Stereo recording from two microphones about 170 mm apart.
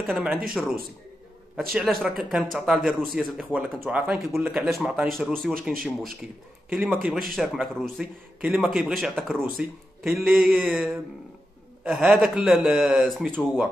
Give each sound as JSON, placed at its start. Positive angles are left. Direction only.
{"t": 0.0, "sound": "speech", "side_deg": -5}
{"t": 1.7, "sound": "speech", "side_deg": 0}